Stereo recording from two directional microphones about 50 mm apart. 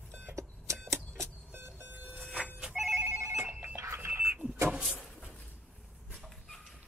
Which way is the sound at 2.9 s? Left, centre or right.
Right.